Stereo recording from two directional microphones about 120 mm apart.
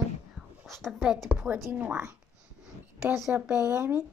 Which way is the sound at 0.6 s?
Centre (ahead or behind).